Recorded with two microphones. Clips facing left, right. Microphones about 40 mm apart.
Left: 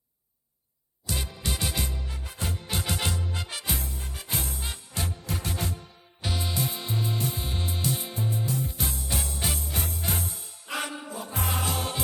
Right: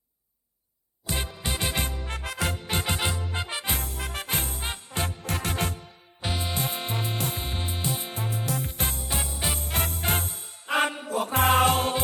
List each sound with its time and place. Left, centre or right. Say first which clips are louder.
1.0 s music: right 2 dB; right
2.0 s music: right 6 dB; right
2.6 s music: even; right
3.8 s music: right 5 dB; right
5.2 s music: right 4 dB; right
6.2 s music: right 1 dB; right
6.5 s music: right 1 dB; right
7.4 s music: even; right
8.1 s music: even; right
9.0 s music: even; centre
9.6 s music: right 4 dB; right
11.1 s music: right 12 dB; right